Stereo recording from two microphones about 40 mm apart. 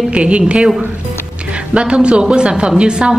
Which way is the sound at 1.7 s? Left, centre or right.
Right.